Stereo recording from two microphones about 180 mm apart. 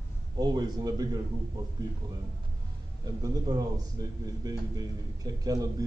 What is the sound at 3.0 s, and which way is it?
A man's voice, 20° right (ahead or behind).